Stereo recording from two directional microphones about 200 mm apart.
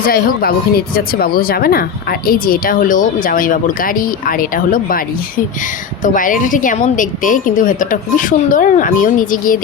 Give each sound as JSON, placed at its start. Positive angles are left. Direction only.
{"t": 0.0, "sound": "speech", "side_deg": 50}
{"t": 6.0, "sound": "a woman's voice", "side_deg": 40}